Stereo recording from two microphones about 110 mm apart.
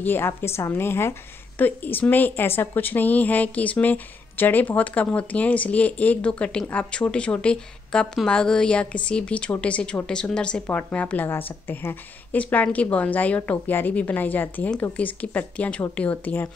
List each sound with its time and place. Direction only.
0.0 s a woman's voice: 20° left (ahead or behind)